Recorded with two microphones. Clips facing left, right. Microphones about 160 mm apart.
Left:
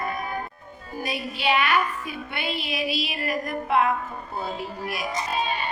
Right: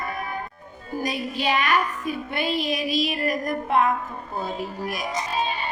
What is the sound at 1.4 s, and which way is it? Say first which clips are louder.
Speech: even; 40° right (ahead or behind).